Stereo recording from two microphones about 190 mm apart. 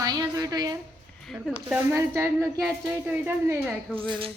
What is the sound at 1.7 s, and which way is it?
Speech, 10° right (ahead or behind).